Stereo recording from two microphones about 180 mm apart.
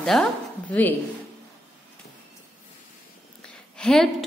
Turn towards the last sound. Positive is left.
turn(degrees=5)  # may be behind; listen again after turning